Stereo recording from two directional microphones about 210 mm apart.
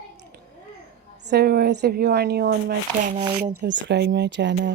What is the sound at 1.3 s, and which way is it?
Speech, 50° right (ahead or behind).